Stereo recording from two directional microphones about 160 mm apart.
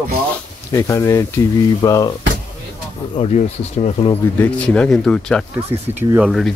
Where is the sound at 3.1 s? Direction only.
35° left (ahead or behind).